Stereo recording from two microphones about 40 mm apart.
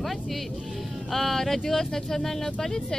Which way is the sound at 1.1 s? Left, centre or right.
Centre.